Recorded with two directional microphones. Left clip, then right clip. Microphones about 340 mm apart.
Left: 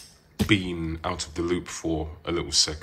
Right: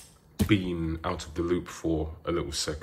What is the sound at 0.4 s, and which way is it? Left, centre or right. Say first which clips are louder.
Speech: left 3 dB; centre.